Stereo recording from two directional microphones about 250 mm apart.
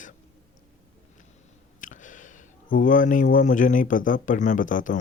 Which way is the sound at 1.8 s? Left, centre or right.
Left.